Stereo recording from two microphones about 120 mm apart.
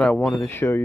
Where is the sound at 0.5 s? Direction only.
20° left (ahead or behind).